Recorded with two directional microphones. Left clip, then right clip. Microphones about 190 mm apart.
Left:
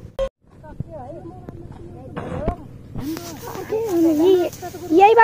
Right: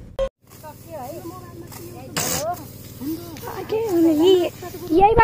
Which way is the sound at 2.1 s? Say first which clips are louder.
Right 5 dB; 10° right (ahead or behind).